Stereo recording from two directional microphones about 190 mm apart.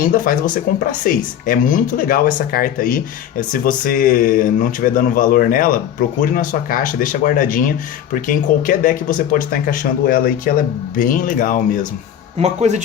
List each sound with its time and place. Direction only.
0.1 s speech: 45° left (ahead or behind)
12.4 s speech: 35° right (ahead or behind)